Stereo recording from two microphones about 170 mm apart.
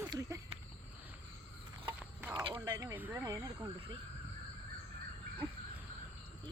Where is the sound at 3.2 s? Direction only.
20° right (ahead or behind).